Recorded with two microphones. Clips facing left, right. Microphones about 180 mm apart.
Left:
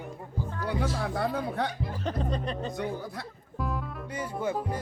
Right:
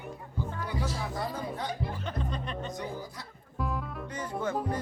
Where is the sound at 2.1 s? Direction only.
40° left (ahead or behind).